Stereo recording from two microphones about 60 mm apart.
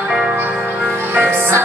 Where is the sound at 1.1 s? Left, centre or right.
Right.